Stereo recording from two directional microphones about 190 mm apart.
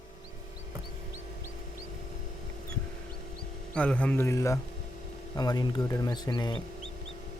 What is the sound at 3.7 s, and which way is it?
Speech, 5° left (ahead or behind).